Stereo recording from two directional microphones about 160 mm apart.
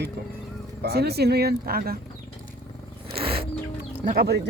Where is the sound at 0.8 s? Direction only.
80° right.